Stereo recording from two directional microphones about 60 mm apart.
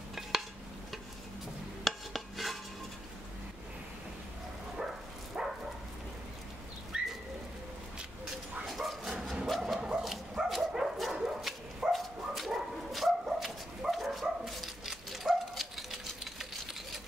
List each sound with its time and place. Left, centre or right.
1.9 s dishes: centre
5.4 s a sound: centre
6.9 s bird: centre
8.3 s bow-wow: centre
9.8 s bow-wow: centre
10.0 s dog: centre